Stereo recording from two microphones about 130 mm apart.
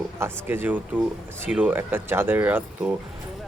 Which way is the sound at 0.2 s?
15° right (ahead or behind).